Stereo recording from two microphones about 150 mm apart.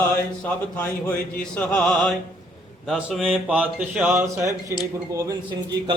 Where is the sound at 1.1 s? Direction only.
10° left (ahead or behind).